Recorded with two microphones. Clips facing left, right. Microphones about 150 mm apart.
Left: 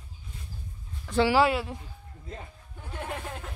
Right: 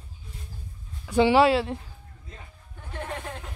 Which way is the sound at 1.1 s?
20° right (ahead or behind).